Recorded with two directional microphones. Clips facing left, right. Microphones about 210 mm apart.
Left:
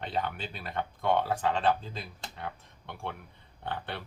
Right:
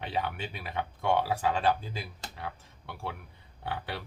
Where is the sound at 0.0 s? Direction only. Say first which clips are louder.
Even; 5° right (ahead or behind).